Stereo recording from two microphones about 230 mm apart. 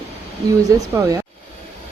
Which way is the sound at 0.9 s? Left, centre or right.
Centre.